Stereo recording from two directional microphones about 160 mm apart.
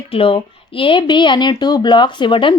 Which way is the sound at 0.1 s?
35° left (ahead or behind).